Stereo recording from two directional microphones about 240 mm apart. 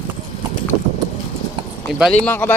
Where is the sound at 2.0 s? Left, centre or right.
Centre.